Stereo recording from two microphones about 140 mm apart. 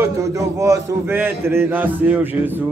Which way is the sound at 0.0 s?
20° right (ahead or behind).